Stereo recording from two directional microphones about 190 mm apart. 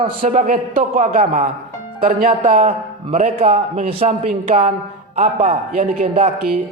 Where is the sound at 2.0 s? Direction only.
50° right (ahead or behind).